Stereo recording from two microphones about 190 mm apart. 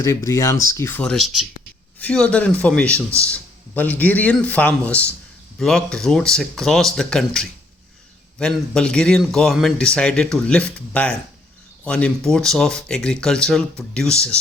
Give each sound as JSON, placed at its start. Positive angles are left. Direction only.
{"t": 0.0, "sound": "a man's voice", "side_deg": 15}